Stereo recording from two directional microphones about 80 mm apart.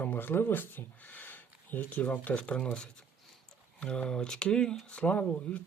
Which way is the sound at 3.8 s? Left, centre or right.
Centre.